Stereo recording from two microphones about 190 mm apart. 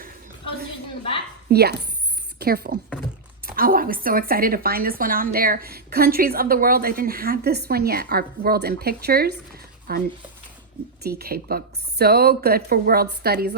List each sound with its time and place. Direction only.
1.5 s a woman's voice: 55° right (ahead or behind)